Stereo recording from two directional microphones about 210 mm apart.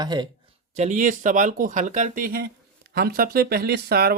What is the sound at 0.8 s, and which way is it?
Speech, 35° right (ahead or behind).